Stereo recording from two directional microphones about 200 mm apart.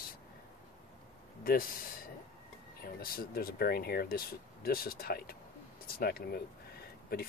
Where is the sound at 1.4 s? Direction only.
45° left (ahead or behind).